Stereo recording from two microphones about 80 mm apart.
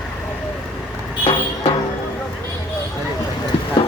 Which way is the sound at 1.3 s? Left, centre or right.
Left.